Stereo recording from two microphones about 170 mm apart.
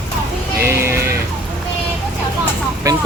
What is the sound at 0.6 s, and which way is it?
Clip-clop, 15° right (ahead or behind).